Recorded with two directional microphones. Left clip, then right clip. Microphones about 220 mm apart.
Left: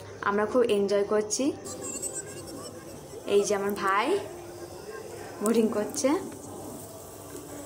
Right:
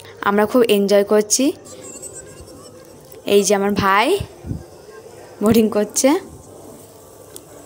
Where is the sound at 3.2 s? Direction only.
45° right (ahead or behind).